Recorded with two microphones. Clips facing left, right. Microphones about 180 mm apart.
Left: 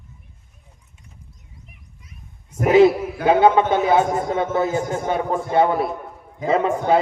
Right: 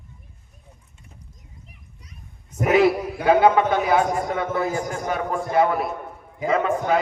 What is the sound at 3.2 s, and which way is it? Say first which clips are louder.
A man's voice: left 1 dB; 25° left (ahead or behind).